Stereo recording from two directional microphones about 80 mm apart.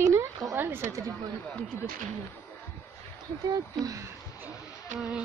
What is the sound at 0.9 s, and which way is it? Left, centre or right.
Speech, right.